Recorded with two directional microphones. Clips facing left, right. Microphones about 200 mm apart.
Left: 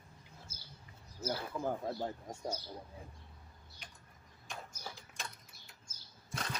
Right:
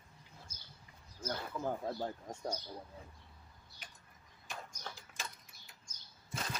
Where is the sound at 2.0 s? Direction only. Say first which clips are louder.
Even; 5° left (ahead or behind).